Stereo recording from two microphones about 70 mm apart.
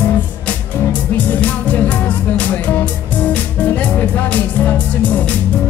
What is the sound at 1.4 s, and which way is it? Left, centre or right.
Music, left.